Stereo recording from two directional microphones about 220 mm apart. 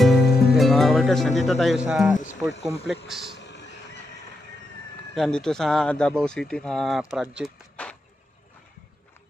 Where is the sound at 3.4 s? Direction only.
50° left (ahead or behind).